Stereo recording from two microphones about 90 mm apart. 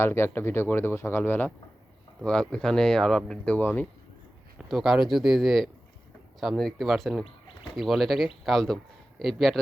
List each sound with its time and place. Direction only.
0.0 s speech: 25° left (ahead or behind)
2.2 s speech: 10° left (ahead or behind)
4.5 s a man's voice: 5° right (ahead or behind)